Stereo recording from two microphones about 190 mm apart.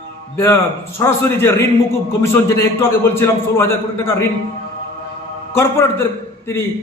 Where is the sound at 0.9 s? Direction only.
15° left (ahead or behind).